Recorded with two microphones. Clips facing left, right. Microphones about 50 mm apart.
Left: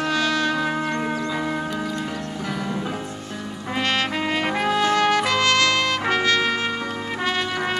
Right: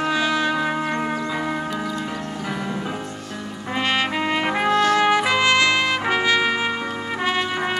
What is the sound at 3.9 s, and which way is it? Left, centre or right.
Trumpet, centre.